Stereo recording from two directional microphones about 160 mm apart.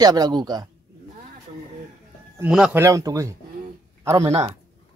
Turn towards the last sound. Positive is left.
turn(degrees=-20)  # may be behind; listen again after turning